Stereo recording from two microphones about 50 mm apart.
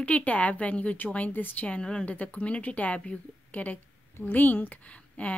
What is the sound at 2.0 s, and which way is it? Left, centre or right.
A woman's voice, left.